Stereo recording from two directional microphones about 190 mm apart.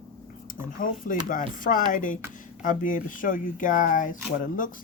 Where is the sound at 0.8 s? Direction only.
45° left (ahead or behind).